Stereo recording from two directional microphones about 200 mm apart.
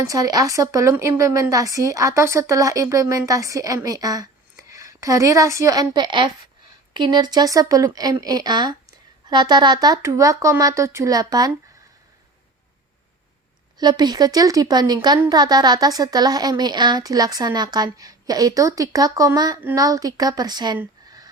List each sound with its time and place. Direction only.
0.1 s a woman's voice: 15° right (ahead or behind)
13.7 s speech: 20° right (ahead or behind)